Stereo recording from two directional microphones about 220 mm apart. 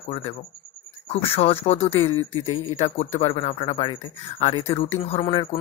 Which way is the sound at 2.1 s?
75° left (ahead or behind).